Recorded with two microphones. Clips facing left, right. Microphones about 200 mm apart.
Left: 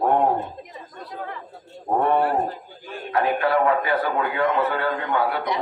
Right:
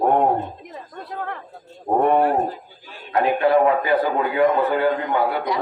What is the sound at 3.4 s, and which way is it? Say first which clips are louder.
A man's voice: right 6 dB; 20° right (ahead or behind).